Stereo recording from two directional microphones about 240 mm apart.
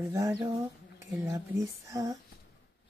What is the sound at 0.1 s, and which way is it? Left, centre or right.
Speech, centre.